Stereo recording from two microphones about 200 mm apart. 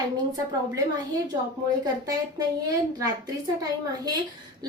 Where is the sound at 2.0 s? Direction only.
20° right (ahead or behind).